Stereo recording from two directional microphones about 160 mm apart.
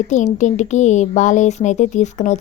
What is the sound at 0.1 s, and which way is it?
Speech, 50° left (ahead or behind).